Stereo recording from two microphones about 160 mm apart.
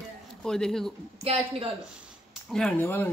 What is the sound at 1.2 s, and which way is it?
Speech, 35° right (ahead or behind).